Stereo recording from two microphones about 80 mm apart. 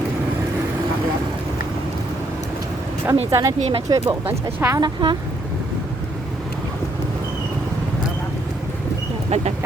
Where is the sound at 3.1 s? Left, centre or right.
Right.